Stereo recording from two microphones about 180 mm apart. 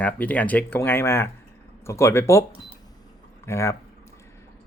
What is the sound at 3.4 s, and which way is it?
Speech, 15° left (ahead or behind).